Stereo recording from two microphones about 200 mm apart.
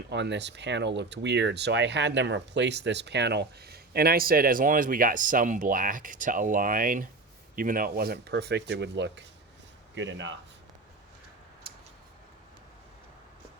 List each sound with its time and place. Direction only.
0.1 s speech: 60° right (ahead or behind)